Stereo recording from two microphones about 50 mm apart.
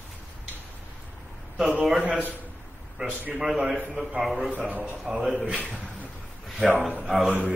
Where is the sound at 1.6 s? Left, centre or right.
Centre.